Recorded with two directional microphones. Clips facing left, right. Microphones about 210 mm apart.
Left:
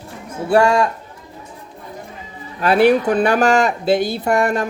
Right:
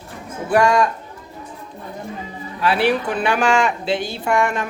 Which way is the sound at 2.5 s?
45° left (ahead or behind).